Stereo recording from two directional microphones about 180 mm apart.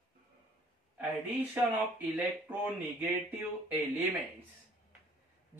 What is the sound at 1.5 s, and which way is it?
Speech, 10° right (ahead or behind).